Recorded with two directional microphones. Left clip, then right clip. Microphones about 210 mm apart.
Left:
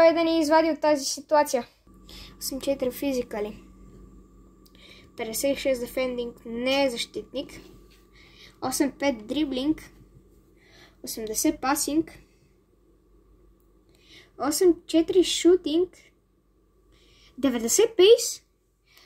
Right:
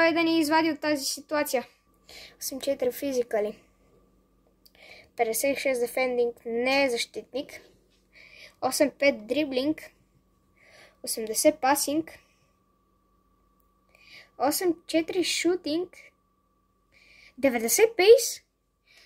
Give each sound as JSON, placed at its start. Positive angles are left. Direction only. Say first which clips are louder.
{"t": 0.0, "sound": "speech", "louder": "left 4 dB", "side_deg": -20}
{"t": 4.7, "sound": "speech", "louder": "right 8 dB", "side_deg": -25}
{"t": 8.1, "sound": "a sound", "louder": "right 3 dB", "side_deg": -20}
{"t": 9.0, "sound": "speech", "louder": "right 2 dB", "side_deg": -20}
{"t": 14.0, "sound": "speech", "louder": "right 2 dB", "side_deg": -20}